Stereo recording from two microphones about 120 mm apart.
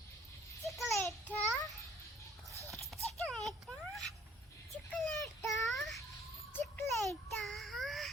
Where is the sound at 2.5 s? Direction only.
25° right (ahead or behind).